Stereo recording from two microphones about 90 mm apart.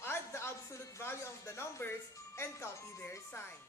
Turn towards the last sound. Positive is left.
turn(degrees=25)  # may be behind; listen again after turning